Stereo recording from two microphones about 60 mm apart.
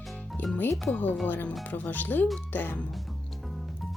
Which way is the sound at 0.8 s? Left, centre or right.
Left.